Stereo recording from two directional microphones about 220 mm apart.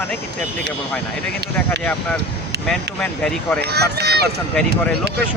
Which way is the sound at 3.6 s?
45° right (ahead or behind).